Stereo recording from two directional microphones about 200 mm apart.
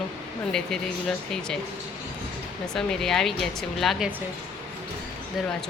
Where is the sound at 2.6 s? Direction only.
5° left (ahead or behind).